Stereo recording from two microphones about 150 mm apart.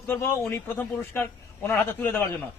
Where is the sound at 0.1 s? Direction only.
15° left (ahead or behind).